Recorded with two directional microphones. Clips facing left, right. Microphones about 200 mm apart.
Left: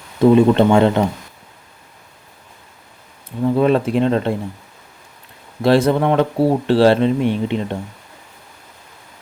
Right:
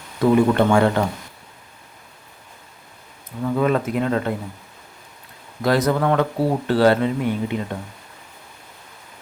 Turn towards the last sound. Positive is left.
turn(degrees=25)  # may be behind; listen again after turning